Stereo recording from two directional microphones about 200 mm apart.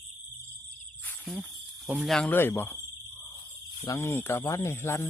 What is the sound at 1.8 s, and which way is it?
Speech, 5° right (ahead or behind).